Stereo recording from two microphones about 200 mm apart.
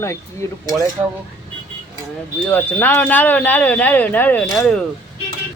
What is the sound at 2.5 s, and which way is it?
Speech, 10° left (ahead or behind).